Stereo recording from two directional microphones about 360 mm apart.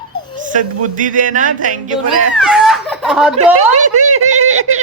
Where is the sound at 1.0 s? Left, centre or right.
Right.